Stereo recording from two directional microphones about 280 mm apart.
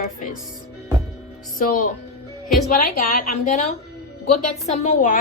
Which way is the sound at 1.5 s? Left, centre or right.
Left.